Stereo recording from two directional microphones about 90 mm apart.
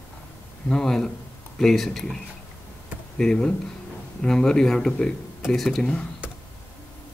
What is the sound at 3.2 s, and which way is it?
Speech, 10° left (ahead or behind).